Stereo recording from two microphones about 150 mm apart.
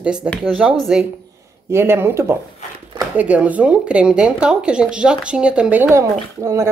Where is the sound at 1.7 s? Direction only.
15° right (ahead or behind).